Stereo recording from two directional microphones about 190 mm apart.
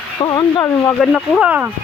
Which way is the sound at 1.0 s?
Centre (ahead or behind).